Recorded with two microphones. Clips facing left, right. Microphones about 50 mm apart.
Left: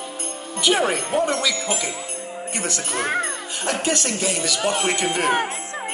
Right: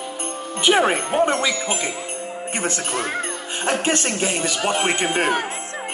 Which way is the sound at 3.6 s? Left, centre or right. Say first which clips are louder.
Right 2 dB; right.